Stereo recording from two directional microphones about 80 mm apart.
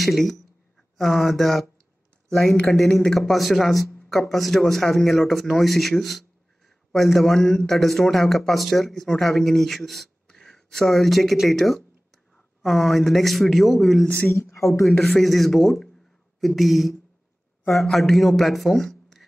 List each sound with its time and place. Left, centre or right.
0.0 s a man's voice: centre
14.0 s a woman's voice: centre
14.3 s speech: left
14.9 s a man's voice: centre